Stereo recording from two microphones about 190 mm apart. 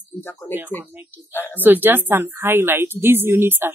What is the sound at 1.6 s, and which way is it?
A woman's voice, 10° right (ahead or behind).